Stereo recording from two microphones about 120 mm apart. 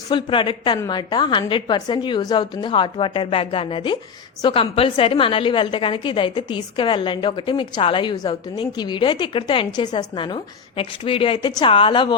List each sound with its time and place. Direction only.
0.1 s a woman's voice: 40° left (ahead or behind)